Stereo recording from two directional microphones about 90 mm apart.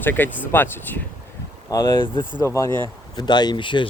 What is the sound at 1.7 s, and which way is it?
Speech, 40° left (ahead or behind).